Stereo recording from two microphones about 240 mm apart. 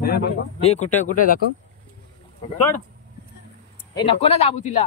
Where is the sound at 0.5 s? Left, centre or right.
Left.